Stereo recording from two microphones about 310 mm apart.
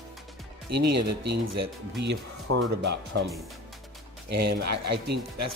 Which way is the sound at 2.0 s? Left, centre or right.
Right.